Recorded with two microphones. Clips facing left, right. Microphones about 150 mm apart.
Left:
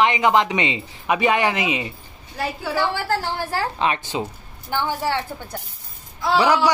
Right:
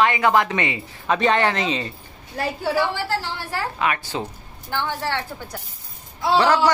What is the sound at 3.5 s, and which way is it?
Speech, 30° left (ahead or behind).